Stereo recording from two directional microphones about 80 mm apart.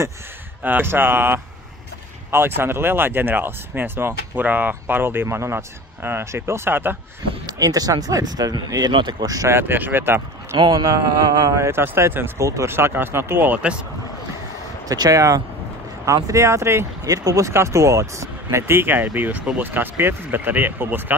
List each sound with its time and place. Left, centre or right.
0.7 s speech: right
7.4 s speech: right
9.5 s speech: right
10.5 s speech: right
11.5 s speech: right
12.4 s speech: right; by 13.7 s centre
14.9 s speech: right